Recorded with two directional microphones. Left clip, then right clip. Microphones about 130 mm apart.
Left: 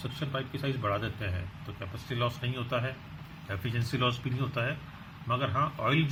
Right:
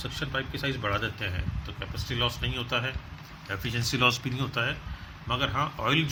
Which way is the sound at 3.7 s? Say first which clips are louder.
Right 6 dB; 50° right (ahead or behind).